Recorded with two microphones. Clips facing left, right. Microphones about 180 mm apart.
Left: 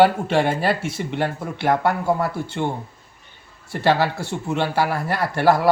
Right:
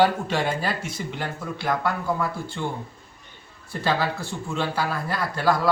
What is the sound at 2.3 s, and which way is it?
Speech, 70° left (ahead or behind).